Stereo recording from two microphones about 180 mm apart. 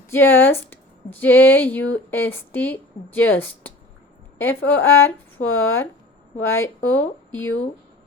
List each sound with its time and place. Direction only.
0.1 s a woman's voice: 10° left (ahead or behind)
7.3 s speech: 90° left